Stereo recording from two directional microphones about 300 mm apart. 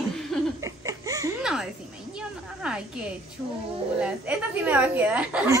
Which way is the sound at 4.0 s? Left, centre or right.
Centre.